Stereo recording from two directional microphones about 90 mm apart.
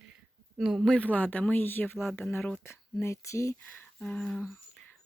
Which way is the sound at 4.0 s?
10° left (ahead or behind).